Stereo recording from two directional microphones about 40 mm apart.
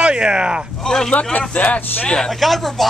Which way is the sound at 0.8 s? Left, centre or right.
Centre.